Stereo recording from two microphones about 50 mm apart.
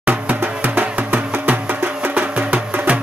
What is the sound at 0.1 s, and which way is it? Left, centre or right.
Music, right.